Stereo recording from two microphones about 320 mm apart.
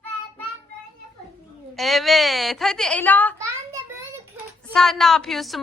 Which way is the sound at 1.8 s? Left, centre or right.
Centre.